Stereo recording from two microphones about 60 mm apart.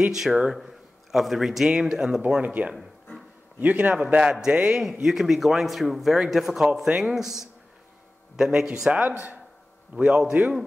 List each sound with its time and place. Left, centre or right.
0.0 s a man's voice: centre
2.2 s a man's voice: right
9.9 s a man's voice: right